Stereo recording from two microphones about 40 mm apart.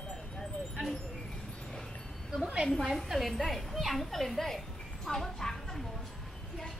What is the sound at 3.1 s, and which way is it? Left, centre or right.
Speech, centre.